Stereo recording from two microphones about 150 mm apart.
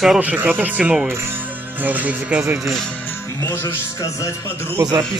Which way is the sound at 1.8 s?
10° right (ahead or behind).